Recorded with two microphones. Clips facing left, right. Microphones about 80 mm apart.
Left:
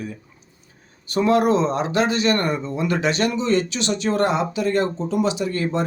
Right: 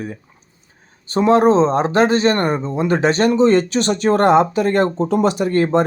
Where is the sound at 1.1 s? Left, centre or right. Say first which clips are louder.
Right 5 dB; right.